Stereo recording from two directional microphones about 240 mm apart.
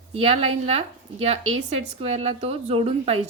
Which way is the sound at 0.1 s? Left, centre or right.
Right.